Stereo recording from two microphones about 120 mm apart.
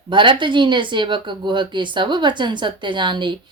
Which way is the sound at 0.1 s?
40° right (ahead or behind).